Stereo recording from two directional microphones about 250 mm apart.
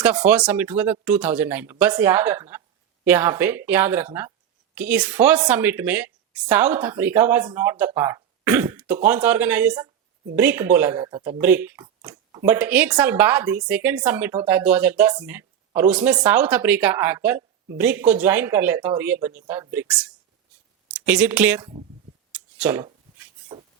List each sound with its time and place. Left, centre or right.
0.0 s speech: centre
21.6 s speech: right
22.3 s a sound: centre